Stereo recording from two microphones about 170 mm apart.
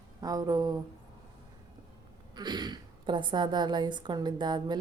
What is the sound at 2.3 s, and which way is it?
A woman's voice, 25° right (ahead or behind).